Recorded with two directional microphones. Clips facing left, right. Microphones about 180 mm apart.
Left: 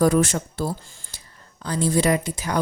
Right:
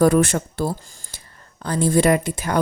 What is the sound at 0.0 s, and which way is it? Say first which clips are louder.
Speech: right 3 dB; 60° right (ahead or behind).